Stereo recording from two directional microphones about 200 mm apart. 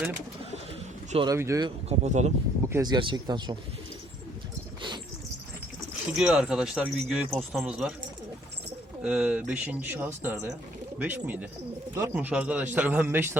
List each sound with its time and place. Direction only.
1.1 s speech: 25° right (ahead or behind)
1.9 s speech: 35° right (ahead or behind)
2.6 s speech: 15° right (ahead or behind)
6.1 s speech: 5° right (ahead or behind)
9.0 s speech: 5° right (ahead or behind)